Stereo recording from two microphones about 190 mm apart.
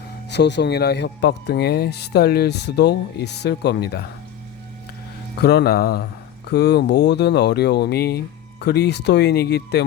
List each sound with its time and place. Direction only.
0.3 s speech: 65° left (ahead or behind)
5.4 s speech: 60° left (ahead or behind)